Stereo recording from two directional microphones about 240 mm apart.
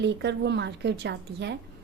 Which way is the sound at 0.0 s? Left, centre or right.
Right.